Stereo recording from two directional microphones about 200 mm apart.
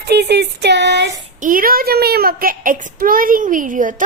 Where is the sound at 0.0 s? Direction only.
55° right (ahead or behind).